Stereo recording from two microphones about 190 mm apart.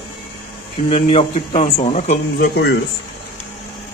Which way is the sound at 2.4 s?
60° left (ahead or behind).